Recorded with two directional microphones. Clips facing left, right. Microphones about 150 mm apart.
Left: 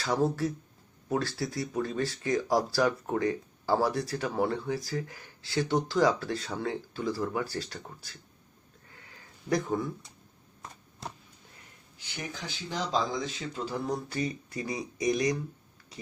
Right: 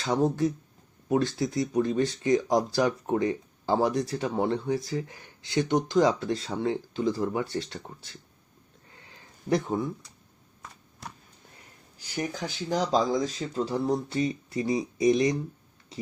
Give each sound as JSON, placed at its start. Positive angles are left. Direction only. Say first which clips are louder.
{"t": 0.0, "sound": "speech", "louder": "right 3 dB", "side_deg": -20}
{"t": 8.9, "sound": "a sound", "louder": "right 1 dB", "side_deg": -25}
{"t": 11.9, "sound": "speech", "louder": "right 8 dB", "side_deg": -45}